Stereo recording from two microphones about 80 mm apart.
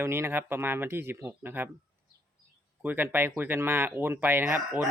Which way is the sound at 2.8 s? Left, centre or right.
Right.